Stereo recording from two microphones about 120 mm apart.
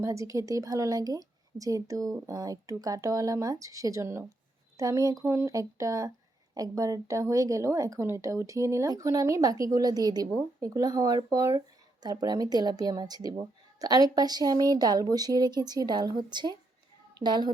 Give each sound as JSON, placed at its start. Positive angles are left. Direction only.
{"t": 0.0, "sound": "a woman's voice", "side_deg": -25}